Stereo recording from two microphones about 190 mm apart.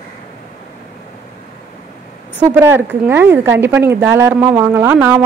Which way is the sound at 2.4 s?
10° right (ahead or behind).